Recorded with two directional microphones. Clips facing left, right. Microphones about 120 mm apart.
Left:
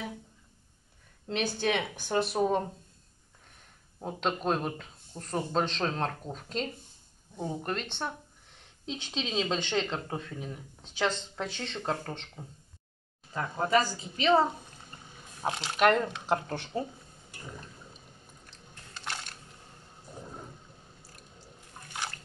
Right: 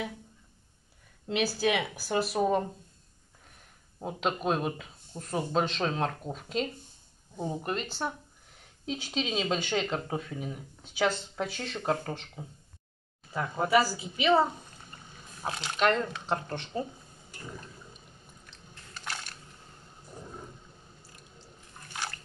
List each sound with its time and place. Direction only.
1.2 s speech: 5° right (ahead or behind)
4.0 s speech: 5° right (ahead or behind)
15.4 s speech: 25° left (ahead or behind)
15.8 s speech: 5° left (ahead or behind)
18.9 s a sound: 25° left (ahead or behind)